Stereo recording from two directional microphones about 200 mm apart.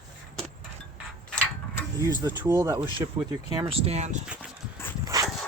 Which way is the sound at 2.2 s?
15° right (ahead or behind).